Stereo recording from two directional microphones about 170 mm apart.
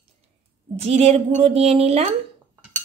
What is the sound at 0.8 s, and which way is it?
Speech, 35° right (ahead or behind).